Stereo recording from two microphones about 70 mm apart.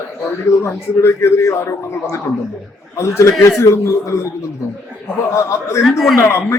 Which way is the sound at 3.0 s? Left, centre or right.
Left.